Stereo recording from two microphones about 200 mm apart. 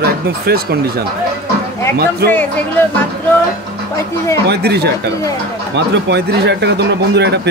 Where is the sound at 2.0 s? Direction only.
50° right (ahead or behind).